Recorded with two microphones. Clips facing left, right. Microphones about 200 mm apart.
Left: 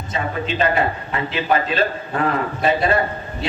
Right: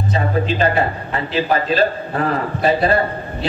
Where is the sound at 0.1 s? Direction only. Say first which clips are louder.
Right 4 dB; 35° right (ahead or behind).